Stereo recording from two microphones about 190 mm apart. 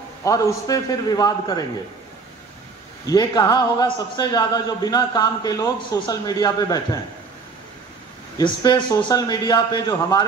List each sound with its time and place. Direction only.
0.2 s a man's voice: 15° left (ahead or behind)
3.1 s a man's voice: 20° left (ahead or behind)
8.4 s a man's voice: 25° left (ahead or behind)